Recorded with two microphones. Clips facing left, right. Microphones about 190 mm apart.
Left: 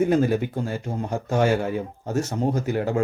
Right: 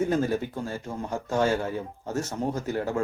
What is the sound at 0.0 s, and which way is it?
Speech, 15° left (ahead or behind).